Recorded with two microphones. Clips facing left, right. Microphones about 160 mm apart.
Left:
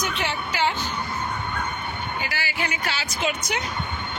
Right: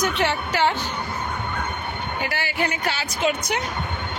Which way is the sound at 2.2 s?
55° right (ahead or behind).